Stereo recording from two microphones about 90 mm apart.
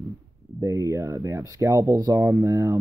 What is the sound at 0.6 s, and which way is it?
Speech, 35° right (ahead or behind).